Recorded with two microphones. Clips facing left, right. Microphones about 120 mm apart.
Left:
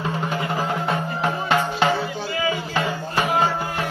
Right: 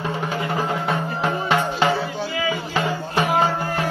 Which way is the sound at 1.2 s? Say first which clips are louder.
Even; 5° left (ahead or behind).